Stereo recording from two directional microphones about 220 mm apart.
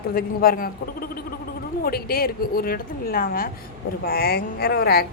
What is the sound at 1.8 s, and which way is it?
A woman's voice, 45° left (ahead or behind).